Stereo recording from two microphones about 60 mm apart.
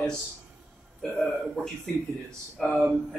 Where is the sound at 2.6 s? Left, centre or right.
Centre.